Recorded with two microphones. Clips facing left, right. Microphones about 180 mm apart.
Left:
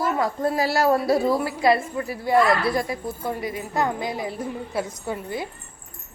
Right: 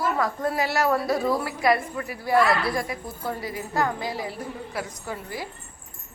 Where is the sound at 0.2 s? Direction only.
25° left (ahead or behind).